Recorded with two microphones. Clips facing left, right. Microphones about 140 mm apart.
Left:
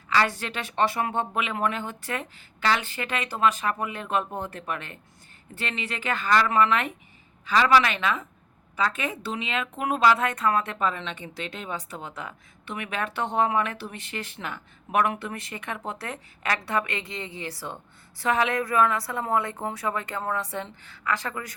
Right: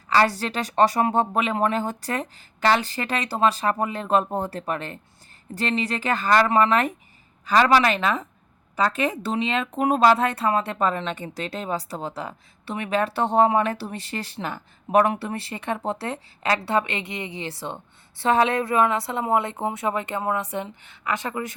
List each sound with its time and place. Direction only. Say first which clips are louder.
0.1 s a woman's voice: right 4 dB; 35° right (ahead or behind)